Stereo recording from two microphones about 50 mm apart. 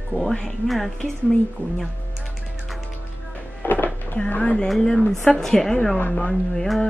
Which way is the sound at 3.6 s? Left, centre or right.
Left.